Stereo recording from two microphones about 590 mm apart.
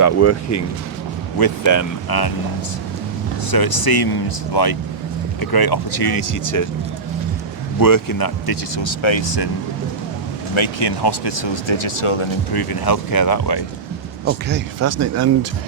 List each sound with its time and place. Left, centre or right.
0.0 s speech: left
3.5 s speech: left
7.8 s speech: left
10.5 s speech: left
12.5 s speech: left
14.3 s speech: centre